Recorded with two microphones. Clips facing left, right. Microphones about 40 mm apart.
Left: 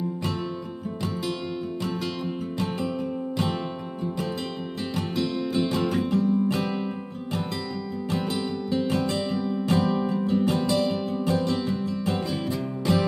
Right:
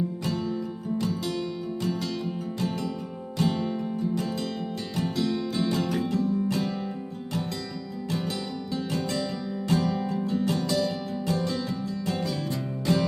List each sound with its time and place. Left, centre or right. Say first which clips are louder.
3.3 s music: right 3 dB; left
4.9 s music: even; centre
8.7 s music: left 4 dB; left
12.8 s music: left 1 dB; centre